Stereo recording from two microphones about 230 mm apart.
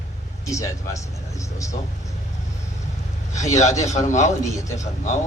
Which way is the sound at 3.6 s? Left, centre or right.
Left.